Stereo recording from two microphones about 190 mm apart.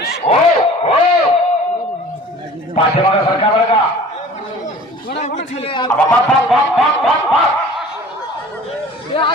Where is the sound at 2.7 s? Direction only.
30° left (ahead or behind).